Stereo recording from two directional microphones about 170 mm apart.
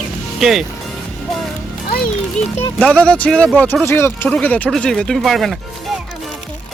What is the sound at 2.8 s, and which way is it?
Speech, 5° left (ahead or behind).